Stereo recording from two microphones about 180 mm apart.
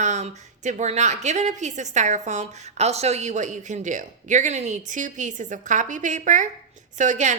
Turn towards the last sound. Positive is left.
turn(degrees=-40)  # may be behind; listen again after turning